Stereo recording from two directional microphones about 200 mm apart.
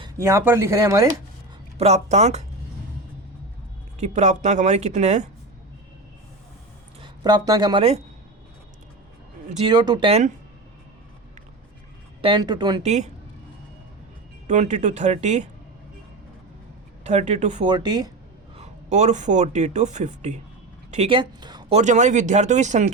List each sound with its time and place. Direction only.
0.0 s speech: 15° right (ahead or behind)
1.8 s speech: 35° right (ahead or behind)
4.0 s speech: 35° right (ahead or behind)
7.0 s speech: 20° right (ahead or behind)
9.5 s speech: 30° right (ahead or behind)
9.7 s speech: 20° right (ahead or behind)
12.2 s speech: 25° right (ahead or behind)
12.8 s speech: 35° right (ahead or behind)
14.4 s speech: 35° right (ahead or behind)
17.0 s speech: 35° right (ahead or behind)
17.7 s speech: 20° right (ahead or behind)
18.5 s speech: 35° right (ahead or behind)
21.8 s speech: 35° right (ahead or behind)